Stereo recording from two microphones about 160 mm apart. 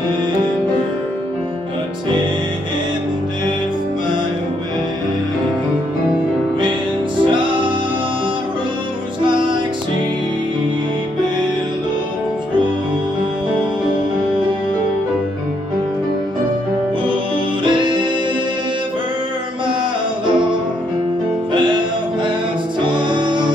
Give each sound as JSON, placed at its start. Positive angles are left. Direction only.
{"t": 9.2, "sound": "music", "side_deg": -30}
{"t": 17.6, "sound": "music", "side_deg": -30}
{"t": 21.5, "sound": "music", "side_deg": -30}